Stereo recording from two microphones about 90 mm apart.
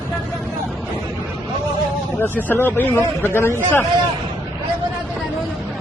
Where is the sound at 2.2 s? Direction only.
20° left (ahead or behind).